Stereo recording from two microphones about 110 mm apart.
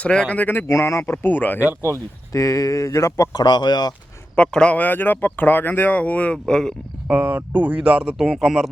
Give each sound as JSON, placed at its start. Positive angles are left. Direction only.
{"t": 0.0, "sound": "speech", "side_deg": 10}
{"t": 1.5, "sound": "speech", "side_deg": -20}
{"t": 2.3, "sound": "speech", "side_deg": 30}
{"t": 4.4, "sound": "speech", "side_deg": 10}
{"t": 7.1, "sound": "speech", "side_deg": -15}